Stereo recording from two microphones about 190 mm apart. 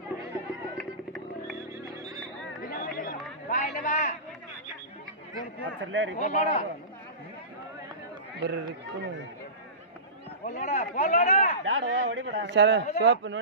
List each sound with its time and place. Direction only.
0.7 s a sound: centre (ahead or behind)
2.6 s chatter: 50° left (ahead or behind)
3.4 s a sound: 40° left (ahead or behind)
5.8 s speech: 80° right
6.1 s speech: 35° left (ahead or behind)
8.4 s speech: 65° right (ahead or behind)
10.4 s speech: 50° left (ahead or behind)
10.7 s speech: 35° left (ahead or behind)
11.6 s a man's voice: 90° right; by 13.4 s 70° right (ahead or behind)